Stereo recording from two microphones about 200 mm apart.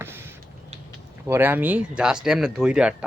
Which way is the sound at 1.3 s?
10° right (ahead or behind).